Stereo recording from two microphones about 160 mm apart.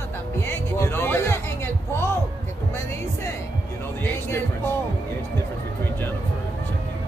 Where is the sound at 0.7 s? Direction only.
15° left (ahead or behind).